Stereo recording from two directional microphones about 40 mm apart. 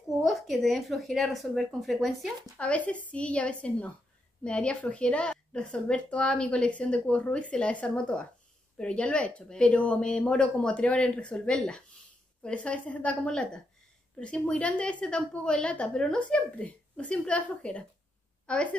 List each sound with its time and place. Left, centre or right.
0.2 s speech: centre
2.6 s a woman's voice: left
5.3 s a woman's voice: centre
5.7 s speech: left
12.4 s a woman's voice: left